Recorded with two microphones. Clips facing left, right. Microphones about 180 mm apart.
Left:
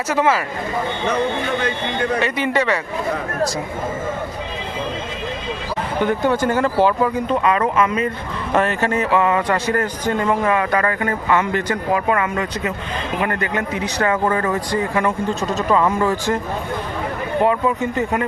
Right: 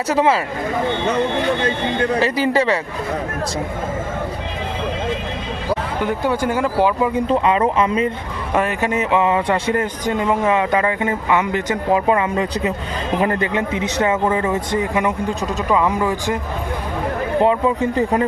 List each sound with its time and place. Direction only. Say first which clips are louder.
0.1 s a man's voice: right 2 dB; 30° right (ahead or behind)
2.1 s speech: right 2 dB; 35° right (ahead or behind)
6.0 s speech: left 4 dB; 5° right (ahead or behind)
7.1 s a man's voice: right 2 dB; 30° right (ahead or behind)
8.5 s a man's voice: left 1 dB; 10° right (ahead or behind)
14.3 s speech: right 1 dB; 10° right (ahead or behind)
17.4 s a man's voice: right 1 dB; 25° right (ahead or behind)